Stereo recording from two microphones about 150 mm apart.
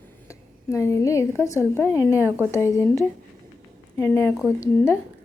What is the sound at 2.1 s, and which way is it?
Speech, 15° right (ahead or behind).